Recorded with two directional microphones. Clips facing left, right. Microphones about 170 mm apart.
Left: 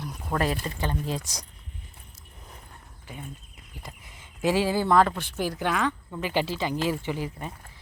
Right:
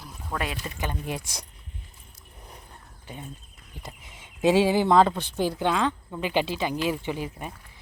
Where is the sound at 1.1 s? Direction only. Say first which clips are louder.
Left 1 dB; 65° right (ahead or behind).